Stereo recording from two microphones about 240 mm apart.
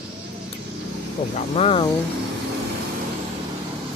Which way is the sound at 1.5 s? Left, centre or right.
Left.